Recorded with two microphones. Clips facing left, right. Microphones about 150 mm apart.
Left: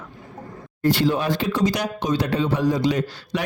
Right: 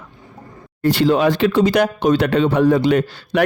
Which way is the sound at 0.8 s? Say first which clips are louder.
Right 5 dB; 70° right (ahead or behind).